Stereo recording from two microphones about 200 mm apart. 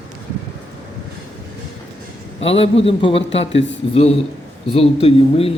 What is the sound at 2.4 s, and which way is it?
A man's voice, 30° left (ahead or behind).